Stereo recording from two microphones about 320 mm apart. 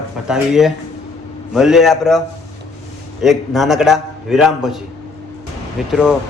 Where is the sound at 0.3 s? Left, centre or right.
Centre.